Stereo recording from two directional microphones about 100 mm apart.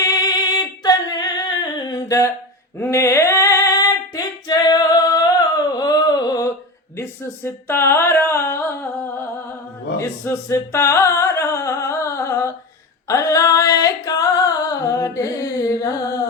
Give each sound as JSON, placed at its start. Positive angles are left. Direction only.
{"t": 0.0, "sound": "singing", "side_deg": 45}
{"t": 2.7, "sound": "female singing", "side_deg": 25}
{"t": 7.4, "sound": "a sound", "side_deg": 25}
{"t": 10.5, "sound": "music", "side_deg": 30}
{"t": 13.1, "sound": "singing", "side_deg": 35}